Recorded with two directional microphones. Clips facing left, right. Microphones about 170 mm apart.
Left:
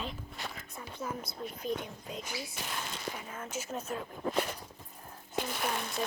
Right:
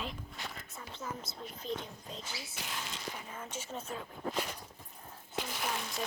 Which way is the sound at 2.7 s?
50° left (ahead or behind).